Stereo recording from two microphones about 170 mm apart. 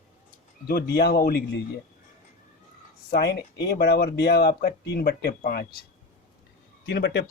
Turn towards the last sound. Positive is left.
turn(degrees=90)